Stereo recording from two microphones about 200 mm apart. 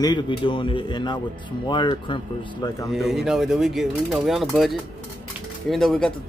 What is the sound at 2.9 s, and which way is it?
Speech, centre (ahead or behind).